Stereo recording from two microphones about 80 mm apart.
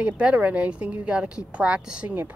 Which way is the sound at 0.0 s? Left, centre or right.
Centre.